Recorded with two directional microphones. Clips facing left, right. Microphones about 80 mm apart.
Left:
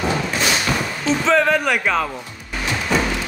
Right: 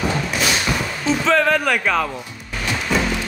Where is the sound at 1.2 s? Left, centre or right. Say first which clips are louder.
Even; centre.